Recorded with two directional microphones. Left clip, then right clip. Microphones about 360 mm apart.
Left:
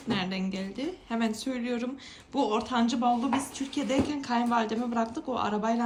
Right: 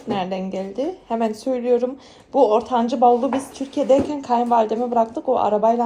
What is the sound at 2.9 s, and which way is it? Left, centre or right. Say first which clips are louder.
Speech: right 14 dB; centre.